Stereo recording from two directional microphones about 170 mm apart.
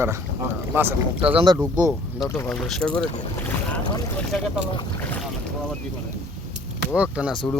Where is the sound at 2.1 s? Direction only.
15° left (ahead or behind).